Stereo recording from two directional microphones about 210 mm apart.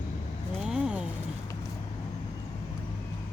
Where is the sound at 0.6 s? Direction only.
5° right (ahead or behind).